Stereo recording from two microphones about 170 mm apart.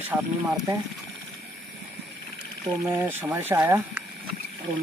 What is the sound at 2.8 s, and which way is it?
Speech, 15° right (ahead or behind).